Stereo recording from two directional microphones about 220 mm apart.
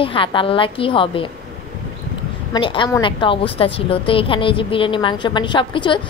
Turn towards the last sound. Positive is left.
turn(degrees=20)  # may be behind; listen again after turning